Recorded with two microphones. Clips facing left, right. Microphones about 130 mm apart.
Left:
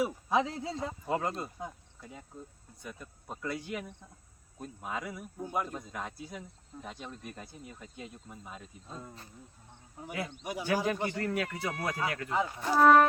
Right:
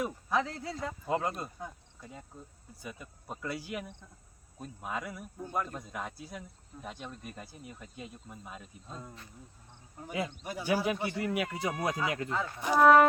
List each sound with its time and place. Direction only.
0.3 s speech: 20° left (ahead or behind)
1.0 s speech: centre (ahead or behind)
1.6 s speech: 15° left (ahead or behind)
2.0 s speech: centre (ahead or behind)
5.4 s speech: 10° left (ahead or behind)
5.7 s speech: centre (ahead or behind)
10.1 s speech: 20° right (ahead or behind)
10.4 s speech: 15° left (ahead or behind)
10.8 s speech: 10° right (ahead or behind)
12.3 s speech: 15° left (ahead or behind)
12.7 s speech: centre (ahead or behind)